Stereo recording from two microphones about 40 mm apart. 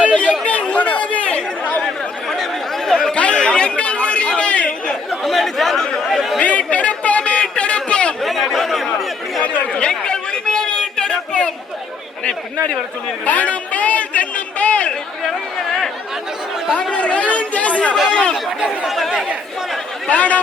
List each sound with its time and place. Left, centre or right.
0.1 s chatter: left
2.3 s chatter: centre
3.1 s chatter: left
5.2 s chatter: centre
6.4 s a sound: left
8.2 s chatter: centre
9.7 s chatter: left
13.2 s a sound: left
16.9 s speech: left
18.9 s speech: centre
20.1 s speech: left